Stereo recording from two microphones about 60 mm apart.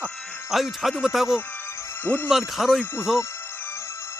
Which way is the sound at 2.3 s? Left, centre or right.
Centre.